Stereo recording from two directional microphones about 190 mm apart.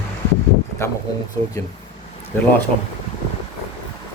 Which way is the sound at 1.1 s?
20° left (ahead or behind).